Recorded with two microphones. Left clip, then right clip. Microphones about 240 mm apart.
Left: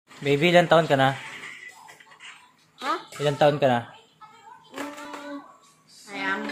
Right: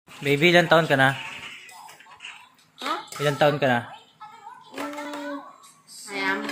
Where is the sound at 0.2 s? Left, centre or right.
Centre.